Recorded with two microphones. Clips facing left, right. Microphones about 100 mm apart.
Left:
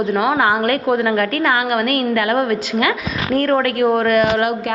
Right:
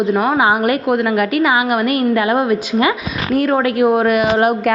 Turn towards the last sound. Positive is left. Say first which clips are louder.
# right 1 dB
turn(degrees=-15)  # may be behind; listen again after turning